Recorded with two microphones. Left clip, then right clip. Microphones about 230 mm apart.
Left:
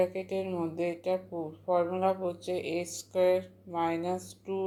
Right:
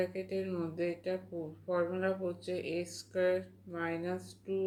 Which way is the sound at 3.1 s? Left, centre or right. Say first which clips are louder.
Left 5 dB; left.